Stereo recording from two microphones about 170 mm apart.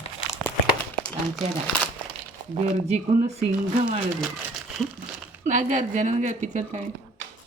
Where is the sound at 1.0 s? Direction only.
5° left (ahead or behind).